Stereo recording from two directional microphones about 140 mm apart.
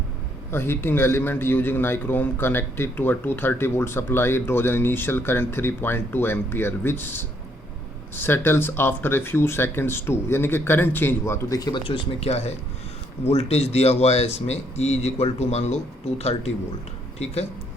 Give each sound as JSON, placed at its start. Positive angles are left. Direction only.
{"t": 0.5, "sound": "a man's voice", "side_deg": 15}
{"t": 11.9, "sound": "speech", "side_deg": 45}